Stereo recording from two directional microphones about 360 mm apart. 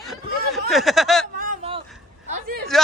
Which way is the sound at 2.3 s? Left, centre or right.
Right.